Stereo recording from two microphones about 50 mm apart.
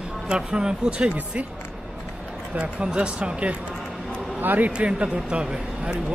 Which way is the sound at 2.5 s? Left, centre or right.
Centre.